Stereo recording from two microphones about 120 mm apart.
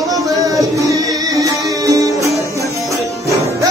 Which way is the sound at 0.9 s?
30° right (ahead or behind).